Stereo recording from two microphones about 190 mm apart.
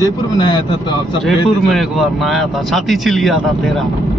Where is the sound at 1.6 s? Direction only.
Centre (ahead or behind).